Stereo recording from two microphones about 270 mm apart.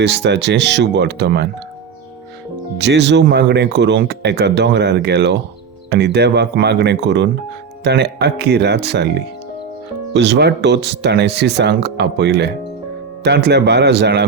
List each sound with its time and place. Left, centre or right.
0.0 s speech: right
2.7 s speech: right